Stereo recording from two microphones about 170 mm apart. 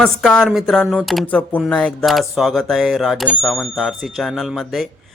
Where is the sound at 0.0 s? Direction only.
5° left (ahead or behind).